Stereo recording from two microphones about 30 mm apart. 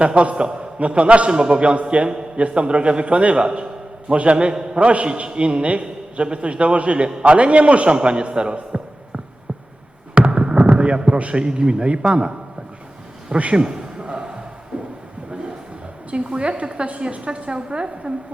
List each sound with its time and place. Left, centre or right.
0.0 s a woman's voice: right
0.3 s a man's voice: right
0.8 s a man's voice: right
4.5 s a man's voice: right
4.8 s a man's voice: right
10.2 s a sound: right
10.6 s a sound: right
11.2 s a man's voice: right
13.3 s a woman's voice: right
13.6 s a sound: right
16.2 s a man's voice: right
16.8 s a woman's voice: right